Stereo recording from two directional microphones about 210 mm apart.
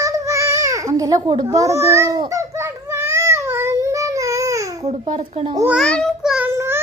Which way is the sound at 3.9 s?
15° right (ahead or behind).